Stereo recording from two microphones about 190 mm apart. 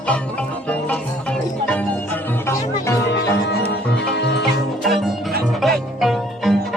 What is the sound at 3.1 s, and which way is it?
Music, 60° left (ahead or behind).